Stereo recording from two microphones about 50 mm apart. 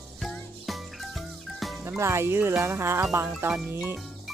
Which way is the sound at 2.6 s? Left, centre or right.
Right.